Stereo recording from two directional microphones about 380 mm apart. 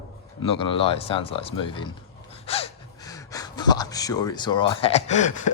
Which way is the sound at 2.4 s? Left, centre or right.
Centre.